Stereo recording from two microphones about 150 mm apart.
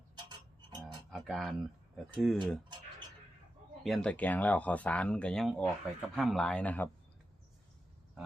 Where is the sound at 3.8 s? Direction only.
5° left (ahead or behind).